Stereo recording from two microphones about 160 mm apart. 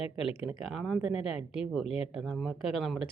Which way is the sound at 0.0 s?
35° left (ahead or behind).